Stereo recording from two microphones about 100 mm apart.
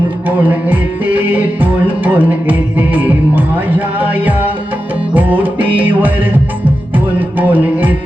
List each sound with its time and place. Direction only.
0.3 s music: 15° right (ahead or behind)